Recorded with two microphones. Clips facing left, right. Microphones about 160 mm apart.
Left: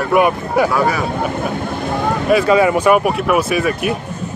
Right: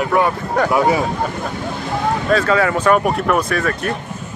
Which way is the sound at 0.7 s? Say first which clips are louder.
Right 1 dB; 20° right (ahead or behind).